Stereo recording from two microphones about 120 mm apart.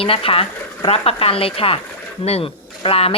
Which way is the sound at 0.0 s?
50° left (ahead or behind).